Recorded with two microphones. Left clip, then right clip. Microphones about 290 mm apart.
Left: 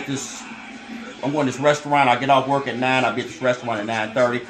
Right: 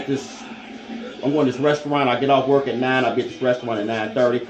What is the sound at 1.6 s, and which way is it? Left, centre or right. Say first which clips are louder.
Speech: left 6 dB; centre.